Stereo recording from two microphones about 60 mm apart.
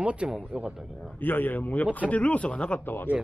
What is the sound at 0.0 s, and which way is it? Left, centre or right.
Speech, centre.